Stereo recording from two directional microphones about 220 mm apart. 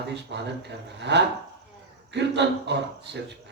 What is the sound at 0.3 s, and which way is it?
A man's voice, 50° right (ahead or behind).